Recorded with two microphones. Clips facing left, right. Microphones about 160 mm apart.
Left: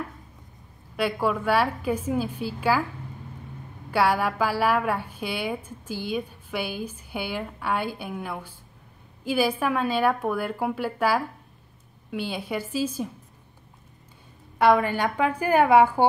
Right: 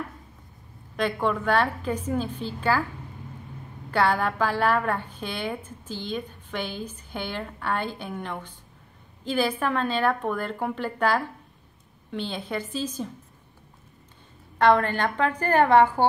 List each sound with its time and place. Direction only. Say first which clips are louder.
0.9 s a woman's voice: even; 10° left (ahead or behind)
3.9 s a woman's voice: left 1 dB; 10° left (ahead or behind)
14.6 s a woman's voice: even; 10° left (ahead or behind)